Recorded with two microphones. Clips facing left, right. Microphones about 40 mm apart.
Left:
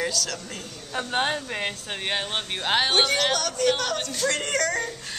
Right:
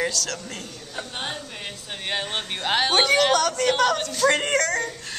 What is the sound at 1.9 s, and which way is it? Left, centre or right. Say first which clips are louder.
Speech: right 4 dB; centre.